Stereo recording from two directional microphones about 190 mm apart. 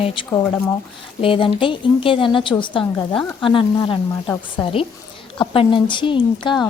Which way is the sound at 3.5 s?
25° left (ahead or behind).